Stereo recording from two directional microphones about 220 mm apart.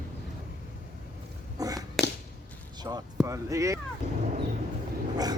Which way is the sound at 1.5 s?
15° right (ahead or behind).